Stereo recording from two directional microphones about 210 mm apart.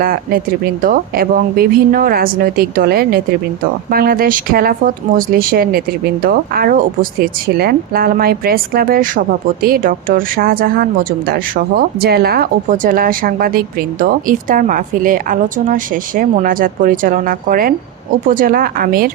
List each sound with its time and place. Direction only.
0.0 s speech: 45° right (ahead or behind)